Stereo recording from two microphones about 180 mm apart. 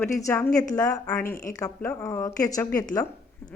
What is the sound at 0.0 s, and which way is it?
Speech, 15° left (ahead or behind).